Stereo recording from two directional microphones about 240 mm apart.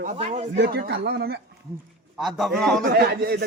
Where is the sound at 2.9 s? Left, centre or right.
Right.